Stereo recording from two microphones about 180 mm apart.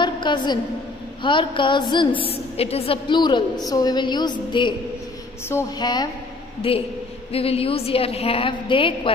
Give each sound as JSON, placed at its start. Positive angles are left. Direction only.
{"t": 0.0, "sound": "a woman's voice", "side_deg": 25}